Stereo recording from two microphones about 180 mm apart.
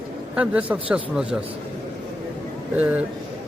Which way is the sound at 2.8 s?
10° right (ahead or behind).